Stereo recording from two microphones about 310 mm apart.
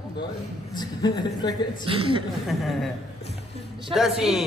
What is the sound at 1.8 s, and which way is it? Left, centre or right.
Speech, centre.